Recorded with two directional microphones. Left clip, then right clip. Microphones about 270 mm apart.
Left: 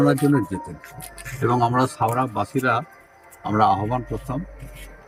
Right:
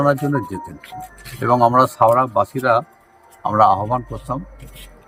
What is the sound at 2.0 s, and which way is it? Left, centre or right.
Speech, centre.